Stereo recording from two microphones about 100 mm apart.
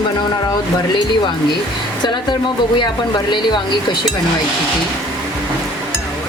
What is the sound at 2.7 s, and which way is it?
Speech, 50° left (ahead or behind).